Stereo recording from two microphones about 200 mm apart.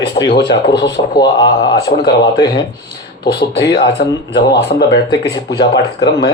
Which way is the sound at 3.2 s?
55° left (ahead or behind).